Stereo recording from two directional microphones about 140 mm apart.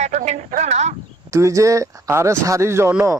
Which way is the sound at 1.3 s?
20° right (ahead or behind).